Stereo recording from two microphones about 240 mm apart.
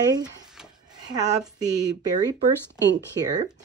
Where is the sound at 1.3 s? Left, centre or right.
Right.